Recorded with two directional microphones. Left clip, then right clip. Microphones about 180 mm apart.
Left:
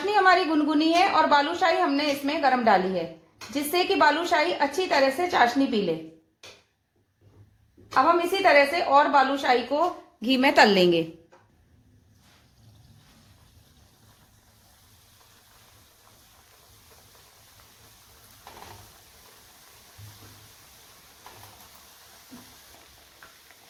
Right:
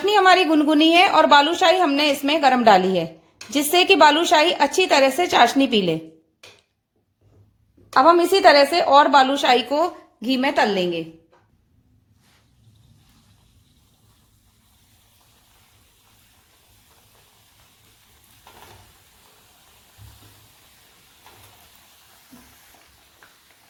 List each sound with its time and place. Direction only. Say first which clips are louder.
0.0 s a woman's voice: right 5 dB; 50° right (ahead or behind)
7.9 s a woman's voice: right 7 dB; 55° right (ahead or behind)
10.2 s speech: right 2 dB; 20° right (ahead or behind)
10.5 s a woman's voice: left 4 dB; 15° left (ahead or behind)